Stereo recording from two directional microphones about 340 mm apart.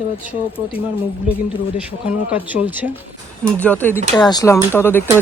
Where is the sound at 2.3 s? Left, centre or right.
Centre.